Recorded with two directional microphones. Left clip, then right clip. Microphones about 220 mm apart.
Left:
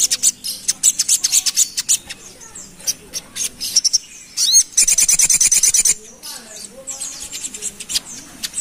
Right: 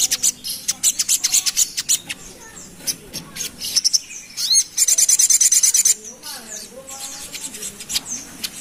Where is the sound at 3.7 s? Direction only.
25° left (ahead or behind).